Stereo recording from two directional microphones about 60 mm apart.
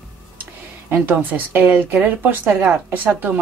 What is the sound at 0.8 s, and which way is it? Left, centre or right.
A woman's voice, right.